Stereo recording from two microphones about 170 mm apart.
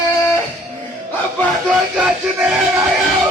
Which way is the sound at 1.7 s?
10° right (ahead or behind).